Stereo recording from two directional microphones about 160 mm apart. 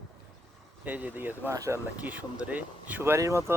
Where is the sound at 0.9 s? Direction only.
10° right (ahead or behind).